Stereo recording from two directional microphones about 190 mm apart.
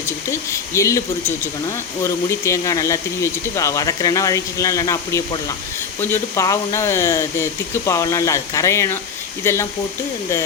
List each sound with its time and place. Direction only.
0.0 s speech: 15° left (ahead or behind)
2.0 s speech: 15° left (ahead or behind)